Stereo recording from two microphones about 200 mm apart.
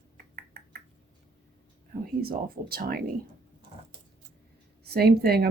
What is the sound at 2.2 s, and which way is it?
Speech, 50° right (ahead or behind).